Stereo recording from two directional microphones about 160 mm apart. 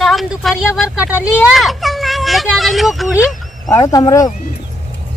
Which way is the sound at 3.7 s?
20° left (ahead or behind).